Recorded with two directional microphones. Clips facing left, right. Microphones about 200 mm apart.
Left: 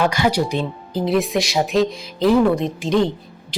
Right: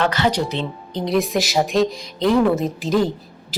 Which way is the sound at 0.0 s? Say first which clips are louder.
Left 1 dB; 10° left (ahead or behind).